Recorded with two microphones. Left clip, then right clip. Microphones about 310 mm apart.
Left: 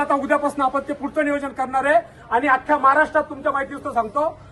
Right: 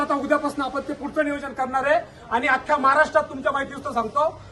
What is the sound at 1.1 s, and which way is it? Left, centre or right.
A man's voice, left.